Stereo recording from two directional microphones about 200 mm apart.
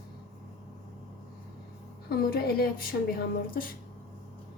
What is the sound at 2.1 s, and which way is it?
A woman's voice, 50° left (ahead or behind).